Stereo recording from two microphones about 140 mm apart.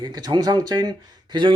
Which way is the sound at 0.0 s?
30° right (ahead or behind).